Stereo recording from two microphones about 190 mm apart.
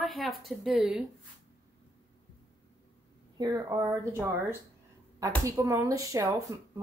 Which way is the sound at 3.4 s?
20° right (ahead or behind).